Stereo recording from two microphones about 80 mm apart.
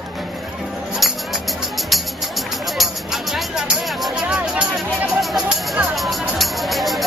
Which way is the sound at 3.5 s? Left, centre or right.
Centre.